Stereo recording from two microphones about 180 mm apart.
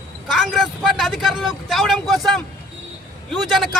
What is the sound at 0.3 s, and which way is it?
Speech, centre (ahead or behind).